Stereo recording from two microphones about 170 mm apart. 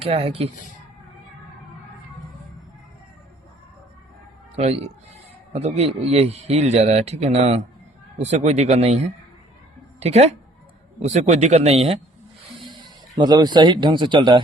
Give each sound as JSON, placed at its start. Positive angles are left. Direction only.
{"t": 0.1, "sound": "a man's voice", "side_deg": -35}
{"t": 4.5, "sound": "a man's voice", "side_deg": -40}
{"t": 12.5, "sound": "speech", "side_deg": -25}